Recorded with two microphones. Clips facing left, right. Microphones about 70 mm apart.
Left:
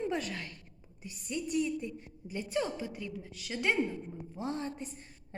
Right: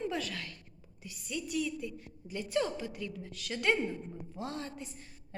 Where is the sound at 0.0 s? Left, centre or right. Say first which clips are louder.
Left 1 dB; left.